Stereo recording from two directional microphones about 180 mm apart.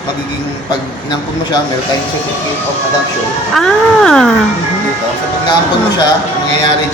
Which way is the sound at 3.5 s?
5° left (ahead or behind).